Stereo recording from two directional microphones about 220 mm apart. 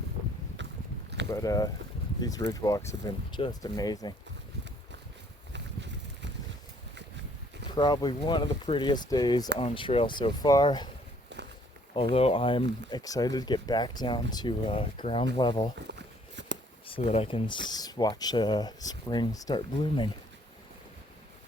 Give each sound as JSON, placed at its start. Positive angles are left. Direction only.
{"t": 0.6, "sound": "biting", "side_deg": -55}
{"t": 1.3, "sound": "speech", "side_deg": 15}
{"t": 5.5, "sound": "a sound", "side_deg": -50}
{"t": 7.8, "sound": "speech", "side_deg": 20}
{"t": 11.3, "sound": "walk", "side_deg": -50}
{"t": 11.9, "sound": "speech", "side_deg": 25}
{"t": 15.9, "sound": "a sound", "side_deg": -55}
{"t": 16.8, "sound": "speech", "side_deg": 25}